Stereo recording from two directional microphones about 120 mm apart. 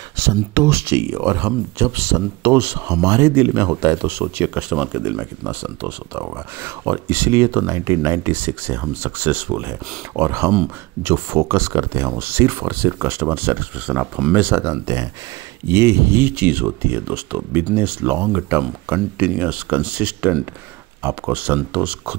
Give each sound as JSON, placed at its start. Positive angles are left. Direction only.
{"t": 0.2, "sound": "speech", "side_deg": -20}
{"t": 4.6, "sound": "speech", "side_deg": -5}
{"t": 14.6, "sound": "speech", "side_deg": -25}